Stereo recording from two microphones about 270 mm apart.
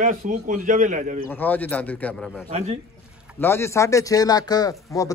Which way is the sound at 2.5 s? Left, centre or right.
Right.